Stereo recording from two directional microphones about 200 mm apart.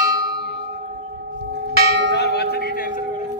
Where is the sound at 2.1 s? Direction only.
55° left (ahead or behind).